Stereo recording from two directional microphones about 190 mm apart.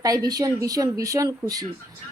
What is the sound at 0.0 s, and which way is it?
A woman's voice, 20° right (ahead or behind).